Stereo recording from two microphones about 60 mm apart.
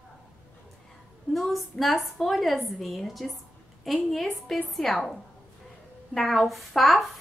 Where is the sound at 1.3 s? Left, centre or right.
Centre.